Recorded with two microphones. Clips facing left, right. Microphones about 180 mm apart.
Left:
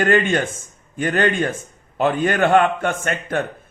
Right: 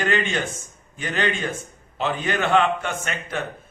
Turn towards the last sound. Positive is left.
turn(degrees=50)  # may be behind; listen again after turning